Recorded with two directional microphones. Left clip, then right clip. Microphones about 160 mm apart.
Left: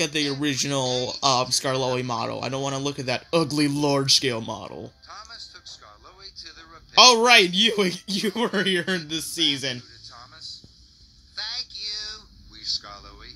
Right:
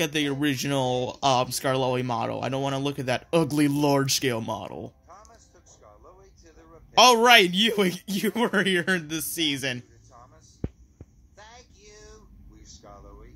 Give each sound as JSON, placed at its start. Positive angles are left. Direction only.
{"t": 0.0, "sound": "speech", "side_deg": 0}
{"t": 7.0, "sound": "speech", "side_deg": 0}
{"t": 11.3, "sound": "a sound", "side_deg": 45}